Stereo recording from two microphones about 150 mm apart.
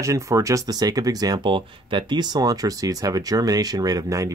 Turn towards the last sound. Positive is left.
turn(degrees=-20)  # may be behind; listen again after turning